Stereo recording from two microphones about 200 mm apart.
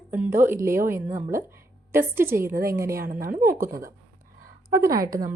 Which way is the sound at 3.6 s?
15° right (ahead or behind).